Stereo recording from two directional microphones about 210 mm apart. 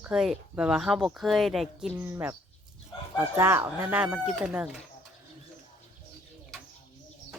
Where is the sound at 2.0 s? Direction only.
10° right (ahead or behind).